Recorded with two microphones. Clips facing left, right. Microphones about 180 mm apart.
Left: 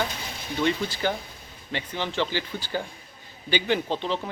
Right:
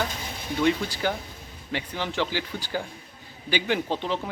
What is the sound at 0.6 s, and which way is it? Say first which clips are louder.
Speech: right 1 dB; 10° right (ahead or behind).